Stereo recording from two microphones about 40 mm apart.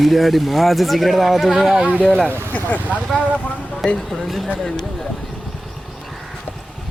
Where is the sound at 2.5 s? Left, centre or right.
Left.